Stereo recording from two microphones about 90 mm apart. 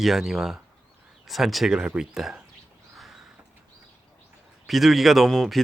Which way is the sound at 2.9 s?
5° right (ahead or behind).